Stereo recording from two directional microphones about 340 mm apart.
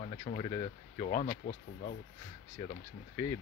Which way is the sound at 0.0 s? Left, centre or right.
Centre.